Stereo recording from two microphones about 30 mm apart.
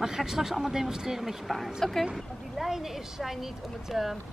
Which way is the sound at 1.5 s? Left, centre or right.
Centre.